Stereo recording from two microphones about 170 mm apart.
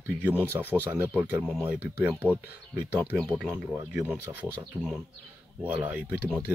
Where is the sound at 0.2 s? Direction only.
10° right (ahead or behind).